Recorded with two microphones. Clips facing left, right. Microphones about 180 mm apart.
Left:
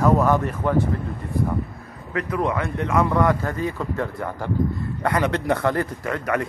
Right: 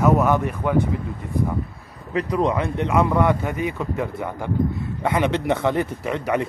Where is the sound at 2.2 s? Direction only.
20° right (ahead or behind).